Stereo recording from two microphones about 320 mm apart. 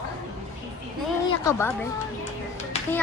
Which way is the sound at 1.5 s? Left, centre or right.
Centre.